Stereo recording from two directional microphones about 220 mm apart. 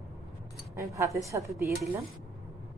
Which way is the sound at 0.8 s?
15° right (ahead or behind).